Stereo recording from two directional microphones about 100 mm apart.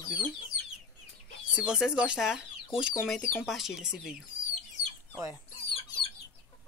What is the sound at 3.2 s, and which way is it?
Speech, 20° left (ahead or behind).